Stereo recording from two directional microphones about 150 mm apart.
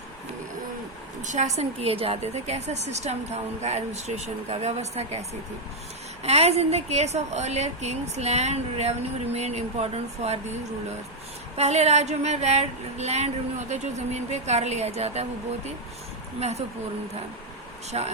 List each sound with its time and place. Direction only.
1.2 s a woman's voice: 50° right (ahead or behind)
6.2 s a woman's voice: 45° right (ahead or behind)
11.5 s a woman's voice: 45° right (ahead or behind)
17.9 s speech: 40° right (ahead or behind)